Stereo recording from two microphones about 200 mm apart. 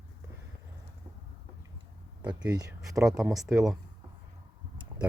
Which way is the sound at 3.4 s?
15° right (ahead or behind).